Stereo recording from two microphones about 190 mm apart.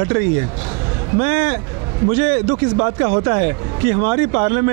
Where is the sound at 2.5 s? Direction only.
30° right (ahead or behind).